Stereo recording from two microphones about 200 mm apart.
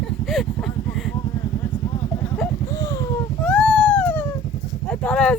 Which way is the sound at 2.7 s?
15° left (ahead or behind).